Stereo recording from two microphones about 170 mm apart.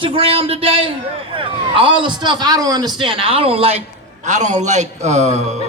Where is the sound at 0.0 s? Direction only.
35° right (ahead or behind).